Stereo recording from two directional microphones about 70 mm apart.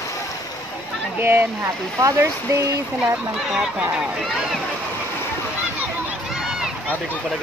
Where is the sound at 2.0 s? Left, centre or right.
Right.